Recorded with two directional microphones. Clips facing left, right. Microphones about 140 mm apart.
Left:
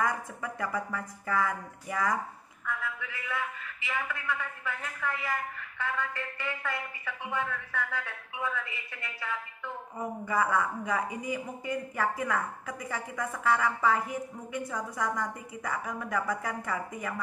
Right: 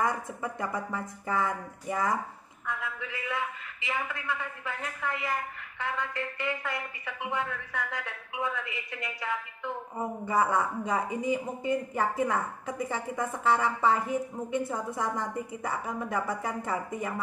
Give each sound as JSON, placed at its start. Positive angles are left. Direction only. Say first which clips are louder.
{"t": 0.0, "sound": "speech", "louder": "right 1 dB", "side_deg": -25}
{"t": 2.6, "sound": "a sound", "louder": "even", "side_deg": -20}
{"t": 3.8, "sound": "speech", "louder": "right 1 dB", "side_deg": -20}